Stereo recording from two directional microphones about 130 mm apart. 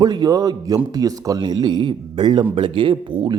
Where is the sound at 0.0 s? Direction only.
30° right (ahead or behind).